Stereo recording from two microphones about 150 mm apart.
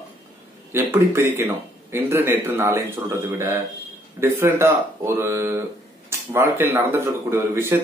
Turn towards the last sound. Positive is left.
turn(degrees=-15)  # may be behind; listen again after turning